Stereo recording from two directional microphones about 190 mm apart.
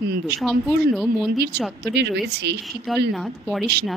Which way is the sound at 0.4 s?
Centre (ahead or behind).